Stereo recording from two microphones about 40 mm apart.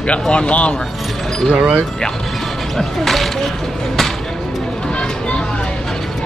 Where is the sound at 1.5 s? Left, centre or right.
Right.